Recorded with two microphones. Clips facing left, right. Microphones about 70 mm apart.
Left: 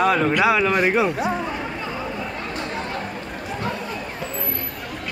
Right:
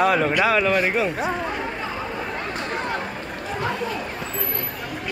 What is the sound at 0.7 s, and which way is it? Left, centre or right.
Speech, centre.